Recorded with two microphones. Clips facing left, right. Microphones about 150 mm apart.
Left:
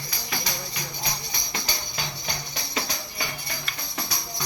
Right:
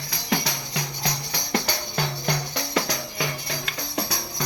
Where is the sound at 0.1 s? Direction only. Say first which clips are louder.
Right 7 dB; 80° right.